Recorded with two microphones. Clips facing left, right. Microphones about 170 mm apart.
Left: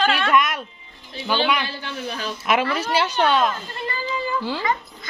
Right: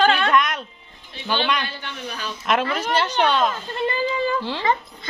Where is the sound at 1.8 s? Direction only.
40° left (ahead or behind).